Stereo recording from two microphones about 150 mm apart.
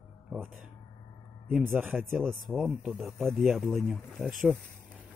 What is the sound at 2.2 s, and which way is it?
Speech, centre (ahead or behind).